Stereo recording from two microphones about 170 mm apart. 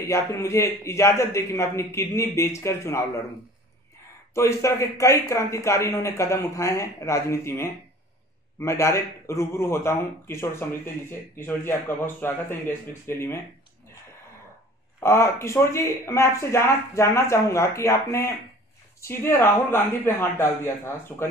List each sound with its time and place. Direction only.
0.1 s a man's voice: 15° left (ahead or behind)
4.3 s a man's voice: 15° left (ahead or behind)
15.0 s a man's voice: 15° left (ahead or behind)